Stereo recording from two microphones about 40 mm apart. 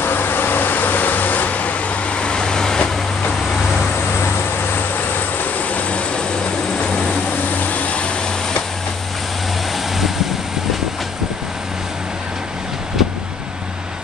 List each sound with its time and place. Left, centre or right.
0.0 s vehicle: left; by 3.3 s centre
5.6 s vehicle: left
7.6 s vehicle: left